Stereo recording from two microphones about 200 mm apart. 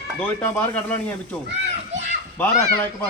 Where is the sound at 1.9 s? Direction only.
65° right (ahead or behind).